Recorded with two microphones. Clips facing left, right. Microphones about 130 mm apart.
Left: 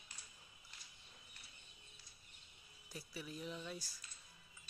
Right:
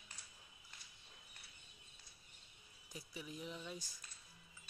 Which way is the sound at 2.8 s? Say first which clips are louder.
Left 1 dB; 15° right (ahead or behind).